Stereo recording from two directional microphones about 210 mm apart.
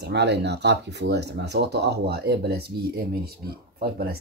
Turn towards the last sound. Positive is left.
turn(degrees=-50)  # may be behind; listen again after turning